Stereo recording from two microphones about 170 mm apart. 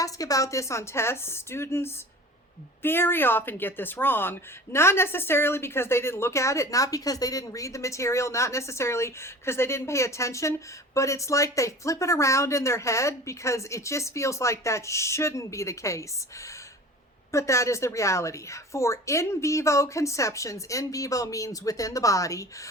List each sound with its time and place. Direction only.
0.0 s speech: 20° left (ahead or behind)